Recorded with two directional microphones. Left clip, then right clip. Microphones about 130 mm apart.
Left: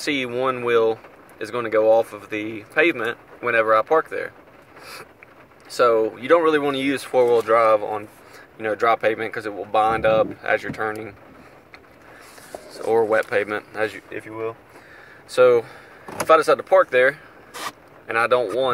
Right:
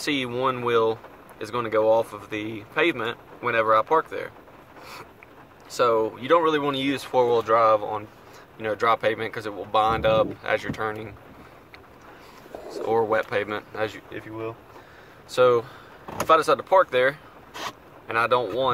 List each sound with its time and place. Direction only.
0.0 s speech: 5° left (ahead or behind)
5.7 s speech: 10° left (ahead or behind)
12.7 s speech: 15° left (ahead or behind)